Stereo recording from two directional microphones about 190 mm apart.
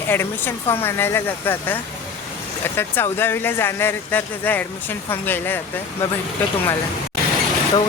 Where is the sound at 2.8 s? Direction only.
10° left (ahead or behind).